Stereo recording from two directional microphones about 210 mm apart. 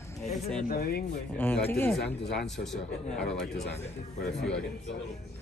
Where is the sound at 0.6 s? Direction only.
45° left (ahead or behind).